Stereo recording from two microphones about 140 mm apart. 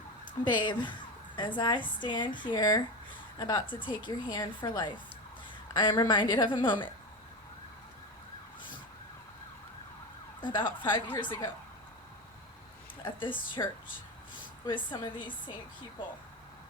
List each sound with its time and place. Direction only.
0.4 s a woman's voice: 35° left (ahead or behind)
10.4 s a woman's voice: 35° left (ahead or behind)
13.1 s a woman's voice: 35° left (ahead or behind)
14.7 s a woman's voice: 35° left (ahead or behind)